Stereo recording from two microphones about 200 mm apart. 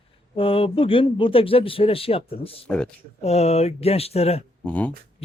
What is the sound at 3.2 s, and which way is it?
Speech, 30° left (ahead or behind).